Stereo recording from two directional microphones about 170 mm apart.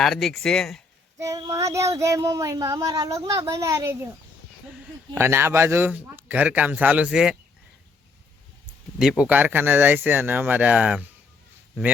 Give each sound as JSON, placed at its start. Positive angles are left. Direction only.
{"t": 0.0, "sound": "speech", "side_deg": 0}
{"t": 1.2, "sound": "child singing", "side_deg": -20}
{"t": 5.1, "sound": "speech", "side_deg": -15}
{"t": 9.0, "sound": "speech", "side_deg": -5}